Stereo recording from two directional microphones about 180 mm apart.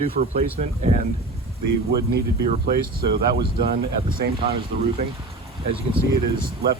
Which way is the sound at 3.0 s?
60° right (ahead or behind).